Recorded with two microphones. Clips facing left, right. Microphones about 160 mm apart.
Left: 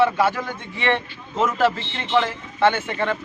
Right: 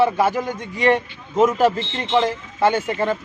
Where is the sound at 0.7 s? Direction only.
40° right (ahead or behind).